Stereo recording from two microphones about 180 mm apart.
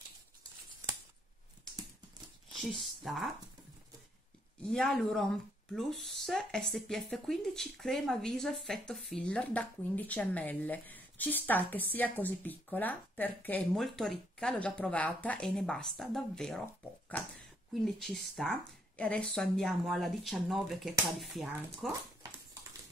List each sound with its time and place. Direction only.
2.5 s speech: centre (ahead or behind)
4.6 s speech: 5° left (ahead or behind)
17.8 s speech: centre (ahead or behind)
22.2 s dog: 20° right (ahead or behind)